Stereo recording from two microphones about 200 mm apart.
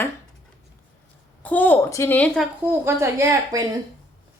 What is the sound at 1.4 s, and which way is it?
A woman's voice, 10° left (ahead or behind).